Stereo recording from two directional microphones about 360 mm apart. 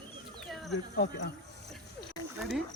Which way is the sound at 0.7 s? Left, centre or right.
Left.